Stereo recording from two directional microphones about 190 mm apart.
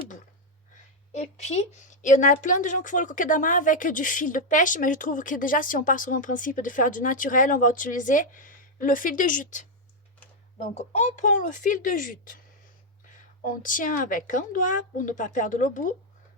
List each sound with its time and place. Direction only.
1.1 s speech: 35° left (ahead or behind)
10.9 s speech: 40° left (ahead or behind)
13.4 s speech: 45° left (ahead or behind)